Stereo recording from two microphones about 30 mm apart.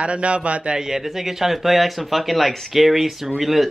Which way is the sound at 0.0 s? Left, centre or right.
Right.